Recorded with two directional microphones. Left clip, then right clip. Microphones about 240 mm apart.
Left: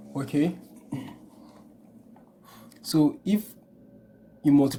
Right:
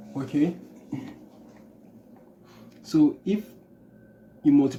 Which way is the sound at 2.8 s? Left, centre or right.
Left.